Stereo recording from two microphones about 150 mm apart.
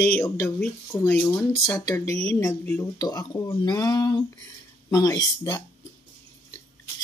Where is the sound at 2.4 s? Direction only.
10° left (ahead or behind).